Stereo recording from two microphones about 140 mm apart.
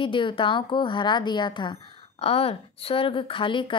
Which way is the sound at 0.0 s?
35° left (ahead or behind).